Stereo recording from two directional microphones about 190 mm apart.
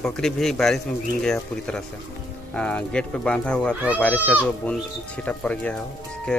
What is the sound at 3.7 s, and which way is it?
Speech, 10° right (ahead or behind).